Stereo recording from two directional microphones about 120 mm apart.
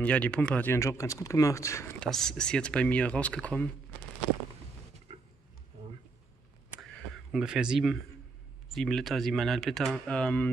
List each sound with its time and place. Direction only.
0.0 s speech: 10° left (ahead or behind)
0.7 s speech: 25° left (ahead or behind)
2.0 s speech: 5° left (ahead or behind)
7.3 s speech: 5° right (ahead or behind); by 10.5 s 10° left (ahead or behind)